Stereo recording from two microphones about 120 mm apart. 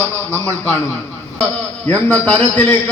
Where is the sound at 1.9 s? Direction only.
15° left (ahead or behind).